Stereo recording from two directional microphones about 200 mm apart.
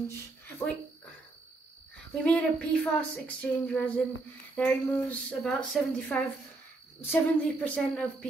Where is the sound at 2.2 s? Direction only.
5° left (ahead or behind).